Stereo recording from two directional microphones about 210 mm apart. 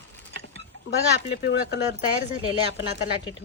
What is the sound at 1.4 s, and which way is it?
Speech, 50° left (ahead or behind).